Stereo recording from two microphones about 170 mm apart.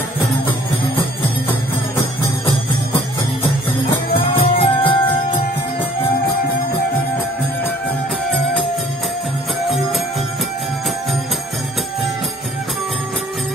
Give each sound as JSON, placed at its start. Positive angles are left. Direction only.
{"t": 0.2, "sound": "music", "side_deg": 30}
{"t": 4.4, "sound": "music", "side_deg": 30}